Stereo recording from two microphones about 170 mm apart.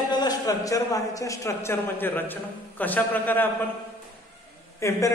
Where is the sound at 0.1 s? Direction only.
25° left (ahead or behind).